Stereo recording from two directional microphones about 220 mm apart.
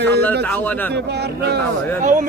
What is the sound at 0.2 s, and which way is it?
Speech, 10° left (ahead or behind).